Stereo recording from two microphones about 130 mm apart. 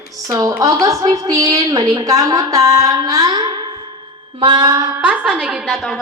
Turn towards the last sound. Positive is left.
turn(degrees=0)  # may be behind; listen again after turning